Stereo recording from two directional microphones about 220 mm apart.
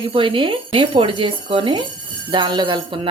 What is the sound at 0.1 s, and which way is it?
Speech, 25° right (ahead or behind).